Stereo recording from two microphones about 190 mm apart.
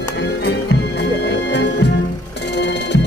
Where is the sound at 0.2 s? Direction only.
60° left (ahead or behind).